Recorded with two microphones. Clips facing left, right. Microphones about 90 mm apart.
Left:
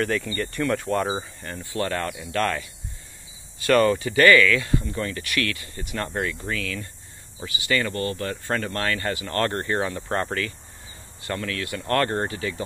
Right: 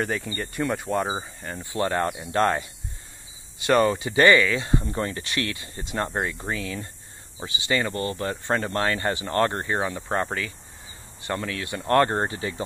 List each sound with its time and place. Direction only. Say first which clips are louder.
0.0 s speech: left 3 dB; 15° right (ahead or behind)
1.6 s speech: right 2 dB; 20° right (ahead or behind)